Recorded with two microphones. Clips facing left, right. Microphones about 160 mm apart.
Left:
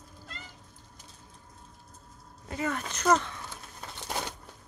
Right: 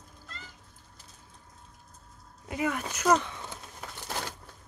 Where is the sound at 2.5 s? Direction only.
10° right (ahead or behind).